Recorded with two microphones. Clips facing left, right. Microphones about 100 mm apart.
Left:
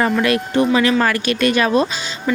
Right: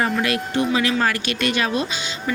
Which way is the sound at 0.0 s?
50° left (ahead or behind).